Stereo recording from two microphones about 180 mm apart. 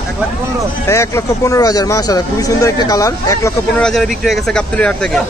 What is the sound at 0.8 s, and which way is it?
Speech, 15° left (ahead or behind).